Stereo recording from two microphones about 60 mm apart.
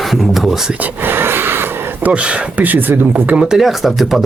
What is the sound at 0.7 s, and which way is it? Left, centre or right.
Speech, right.